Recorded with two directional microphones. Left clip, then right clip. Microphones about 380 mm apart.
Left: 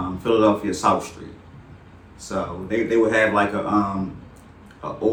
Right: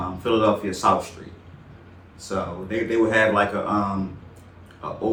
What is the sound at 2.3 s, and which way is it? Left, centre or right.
Speech, centre.